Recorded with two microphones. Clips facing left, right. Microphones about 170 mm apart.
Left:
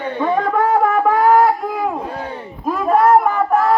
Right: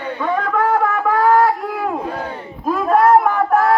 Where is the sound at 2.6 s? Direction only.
Centre (ahead or behind).